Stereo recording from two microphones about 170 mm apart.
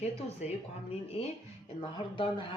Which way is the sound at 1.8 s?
30° left (ahead or behind).